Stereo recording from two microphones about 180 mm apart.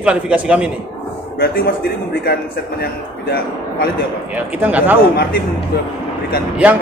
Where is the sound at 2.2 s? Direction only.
60° left (ahead or behind).